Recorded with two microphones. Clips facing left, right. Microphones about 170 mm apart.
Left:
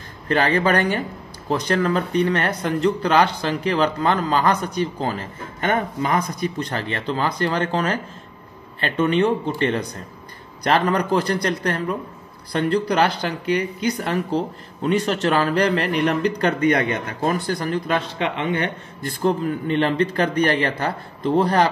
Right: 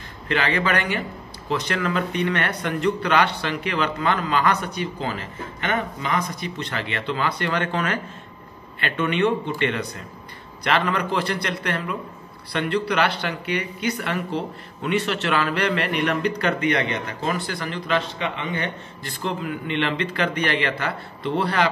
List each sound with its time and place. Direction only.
0.3 s speech: 40° left (ahead or behind)
9.0 s speech: 35° left (ahead or behind)